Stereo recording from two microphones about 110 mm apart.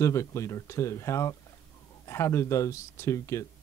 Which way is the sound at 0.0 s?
25° left (ahead or behind).